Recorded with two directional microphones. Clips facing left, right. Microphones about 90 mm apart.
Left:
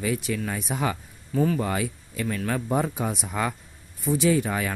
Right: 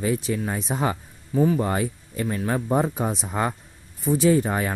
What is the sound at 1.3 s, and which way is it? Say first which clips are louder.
Speech: right 3 dB; 15° right (ahead or behind).